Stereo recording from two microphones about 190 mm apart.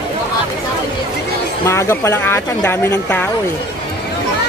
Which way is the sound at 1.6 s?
15° left (ahead or behind).